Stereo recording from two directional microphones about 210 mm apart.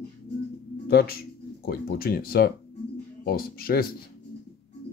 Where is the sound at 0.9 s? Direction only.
45° left (ahead or behind).